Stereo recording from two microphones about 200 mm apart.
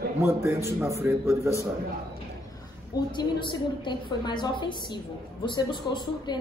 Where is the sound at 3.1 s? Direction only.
20° left (ahead or behind).